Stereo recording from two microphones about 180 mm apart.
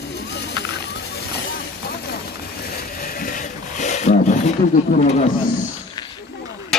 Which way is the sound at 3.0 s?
50° left (ahead or behind).